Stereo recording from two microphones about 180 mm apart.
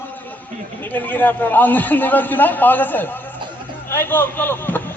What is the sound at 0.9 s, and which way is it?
A man's voice, 10° left (ahead or behind).